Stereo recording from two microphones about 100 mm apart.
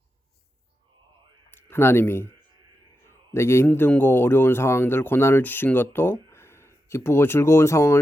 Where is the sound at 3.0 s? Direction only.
25° left (ahead or behind).